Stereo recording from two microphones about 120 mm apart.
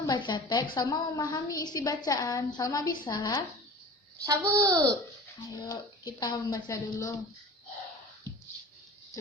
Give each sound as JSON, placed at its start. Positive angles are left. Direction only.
{"t": 0.0, "sound": "a woman's voice", "side_deg": 35}
{"t": 4.2, "sound": "a child's voice", "side_deg": -25}
{"t": 5.6, "sound": "a woman's voice", "side_deg": 30}